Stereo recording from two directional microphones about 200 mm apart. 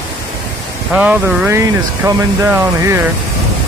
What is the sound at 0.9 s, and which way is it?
Speech, 5° right (ahead or behind).